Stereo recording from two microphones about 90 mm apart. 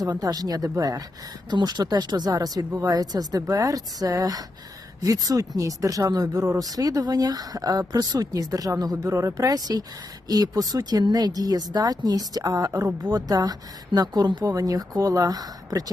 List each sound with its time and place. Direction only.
0.0 s speech: 45° right (ahead or behind)
1.5 s speech: 55° right (ahead or behind)